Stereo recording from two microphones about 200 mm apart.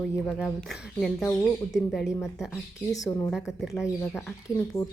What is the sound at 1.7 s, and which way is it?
Speech, centre (ahead or behind).